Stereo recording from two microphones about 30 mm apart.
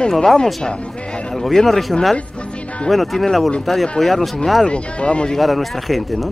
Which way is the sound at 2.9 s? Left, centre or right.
Centre.